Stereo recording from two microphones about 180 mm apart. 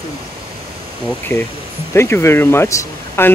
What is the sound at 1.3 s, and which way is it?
Speech, 15° left (ahead or behind).